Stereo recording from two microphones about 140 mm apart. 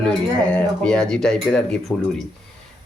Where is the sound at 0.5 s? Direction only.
5° left (ahead or behind).